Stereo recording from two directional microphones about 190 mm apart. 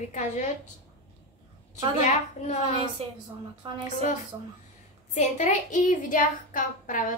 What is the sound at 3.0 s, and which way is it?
Speech, 30° right (ahead or behind).